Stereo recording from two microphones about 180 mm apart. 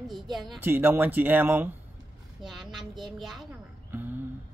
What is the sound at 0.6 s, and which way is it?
A woman's voice, 10° right (ahead or behind).